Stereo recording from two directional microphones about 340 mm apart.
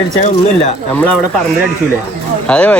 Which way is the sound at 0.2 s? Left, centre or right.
Left.